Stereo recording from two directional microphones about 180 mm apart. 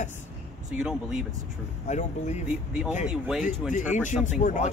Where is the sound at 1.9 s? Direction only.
40° left (ahead or behind).